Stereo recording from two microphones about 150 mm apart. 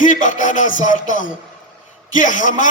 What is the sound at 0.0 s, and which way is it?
Music, 60° left (ahead or behind).